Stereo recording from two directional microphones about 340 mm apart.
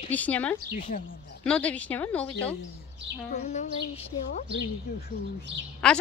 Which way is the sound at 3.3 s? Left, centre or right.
Centre.